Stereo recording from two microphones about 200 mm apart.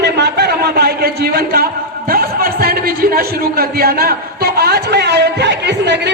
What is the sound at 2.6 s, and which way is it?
Speech, 50° right (ahead or behind).